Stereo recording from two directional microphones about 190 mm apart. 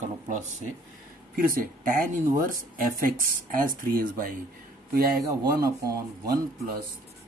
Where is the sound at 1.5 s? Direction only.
50° right (ahead or behind).